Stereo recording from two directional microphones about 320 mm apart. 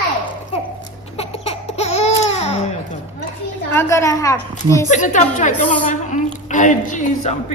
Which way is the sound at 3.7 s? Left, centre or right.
Centre.